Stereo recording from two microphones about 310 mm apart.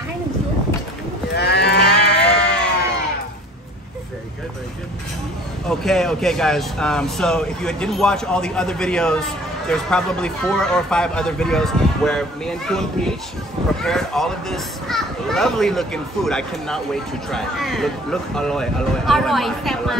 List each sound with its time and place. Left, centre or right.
1.3 s livestock: left
5.7 s a child's voice: centre